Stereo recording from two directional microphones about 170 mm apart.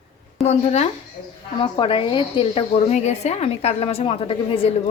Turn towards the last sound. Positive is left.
turn(degrees=30)  # may be behind; listen again after turning